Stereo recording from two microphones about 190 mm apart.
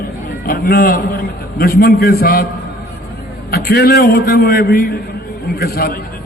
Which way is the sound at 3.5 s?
55° left (ahead or behind).